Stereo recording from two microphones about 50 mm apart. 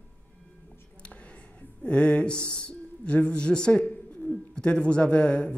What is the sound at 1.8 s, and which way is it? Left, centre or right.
Speech, left.